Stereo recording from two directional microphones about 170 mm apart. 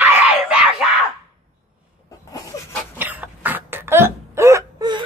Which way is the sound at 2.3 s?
20° left (ahead or behind).